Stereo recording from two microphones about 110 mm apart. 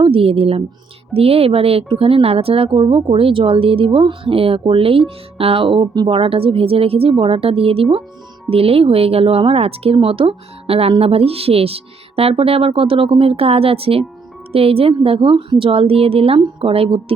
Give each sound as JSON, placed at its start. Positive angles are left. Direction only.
{"t": 0.0, "sound": "a woman's voice", "side_deg": -55}